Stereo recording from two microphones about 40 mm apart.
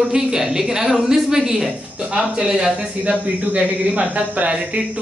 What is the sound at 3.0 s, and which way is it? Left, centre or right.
Speech, right.